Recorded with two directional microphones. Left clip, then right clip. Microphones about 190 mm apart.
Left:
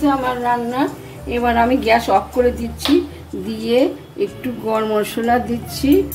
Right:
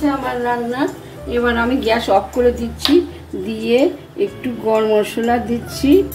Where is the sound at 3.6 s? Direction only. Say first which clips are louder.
Right 1 dB; 10° left (ahead or behind).